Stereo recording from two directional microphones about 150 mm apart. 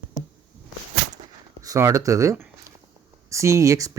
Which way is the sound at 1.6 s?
20° right (ahead or behind).